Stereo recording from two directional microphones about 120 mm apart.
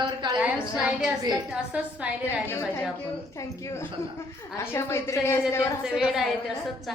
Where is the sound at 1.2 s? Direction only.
35° right (ahead or behind).